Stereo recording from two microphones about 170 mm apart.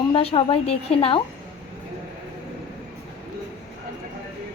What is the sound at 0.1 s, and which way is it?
A woman's voice, 35° left (ahead or behind).